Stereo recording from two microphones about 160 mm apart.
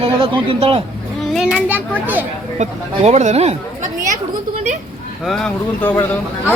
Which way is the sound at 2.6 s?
45° right (ahead or behind).